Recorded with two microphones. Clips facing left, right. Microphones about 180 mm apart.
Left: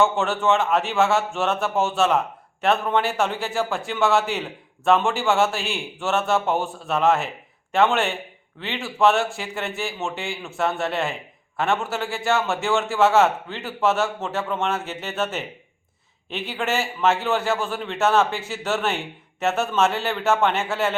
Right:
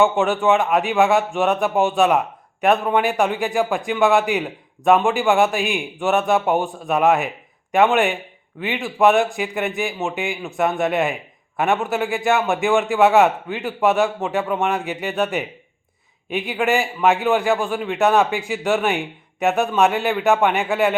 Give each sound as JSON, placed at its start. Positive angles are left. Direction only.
{"t": 0.0, "sound": "a man's voice", "side_deg": -15}